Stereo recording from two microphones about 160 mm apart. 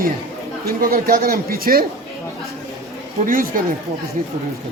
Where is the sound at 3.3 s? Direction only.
60° right (ahead or behind).